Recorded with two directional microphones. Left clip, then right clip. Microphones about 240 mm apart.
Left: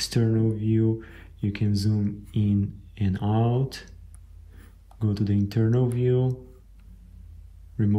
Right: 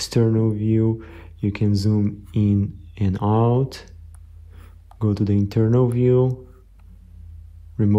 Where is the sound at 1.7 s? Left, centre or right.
Right.